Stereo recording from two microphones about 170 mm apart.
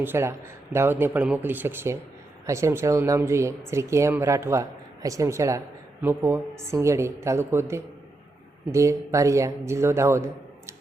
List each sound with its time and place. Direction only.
0.0 s speech: 15° right (ahead or behind)